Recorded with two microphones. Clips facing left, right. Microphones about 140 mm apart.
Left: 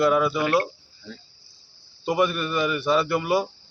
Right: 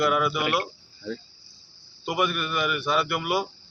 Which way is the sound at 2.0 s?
30° left (ahead or behind).